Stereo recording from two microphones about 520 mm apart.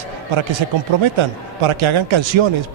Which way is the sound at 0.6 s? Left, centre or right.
Right.